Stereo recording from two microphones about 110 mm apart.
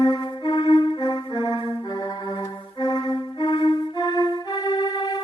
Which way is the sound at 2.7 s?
40° left (ahead or behind).